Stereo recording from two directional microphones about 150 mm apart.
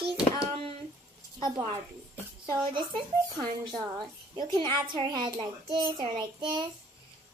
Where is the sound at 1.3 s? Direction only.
30° right (ahead or behind).